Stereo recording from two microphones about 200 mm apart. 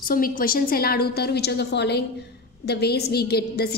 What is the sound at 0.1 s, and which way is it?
A woman's voice, 45° left (ahead or behind).